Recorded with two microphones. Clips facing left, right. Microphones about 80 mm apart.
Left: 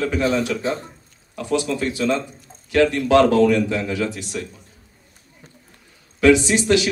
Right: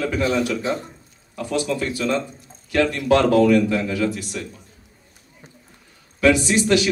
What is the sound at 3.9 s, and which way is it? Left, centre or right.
Speech, left.